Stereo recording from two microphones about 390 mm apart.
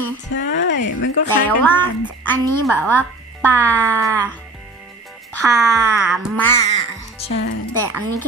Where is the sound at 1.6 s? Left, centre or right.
Centre.